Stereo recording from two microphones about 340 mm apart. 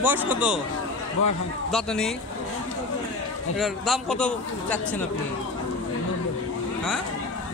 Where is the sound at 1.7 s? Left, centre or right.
Centre.